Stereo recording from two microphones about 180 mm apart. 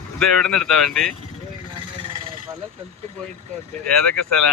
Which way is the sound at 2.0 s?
30° right (ahead or behind).